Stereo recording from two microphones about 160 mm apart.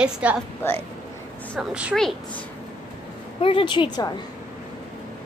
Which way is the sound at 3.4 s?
35° left (ahead or behind).